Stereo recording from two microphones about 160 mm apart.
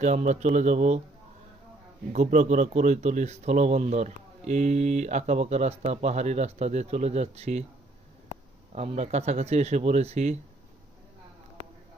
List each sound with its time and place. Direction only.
0.0 s speech: 50° right (ahead or behind)
2.1 s speech: 45° right (ahead or behind)
8.7 s speech: 45° right (ahead or behind)